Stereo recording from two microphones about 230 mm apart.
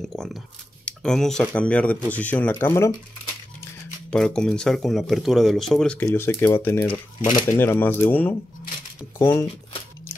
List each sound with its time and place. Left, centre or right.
0.1 s speech: centre
4.1 s speech: centre